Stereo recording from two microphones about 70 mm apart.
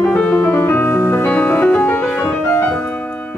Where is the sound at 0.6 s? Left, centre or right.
Left.